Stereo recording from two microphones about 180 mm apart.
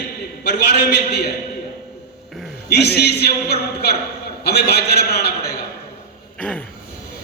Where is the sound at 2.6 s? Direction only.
65° left (ahead or behind).